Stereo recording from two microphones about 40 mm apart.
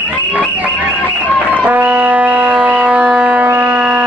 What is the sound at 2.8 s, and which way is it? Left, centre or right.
Shofar, right.